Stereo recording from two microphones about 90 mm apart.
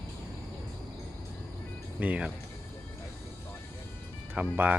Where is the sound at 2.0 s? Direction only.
15° right (ahead or behind).